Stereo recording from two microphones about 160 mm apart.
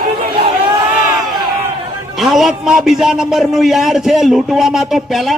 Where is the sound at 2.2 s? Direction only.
Centre (ahead or behind).